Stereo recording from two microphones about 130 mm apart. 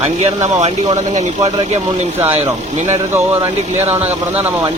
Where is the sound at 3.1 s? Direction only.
20° right (ahead or behind).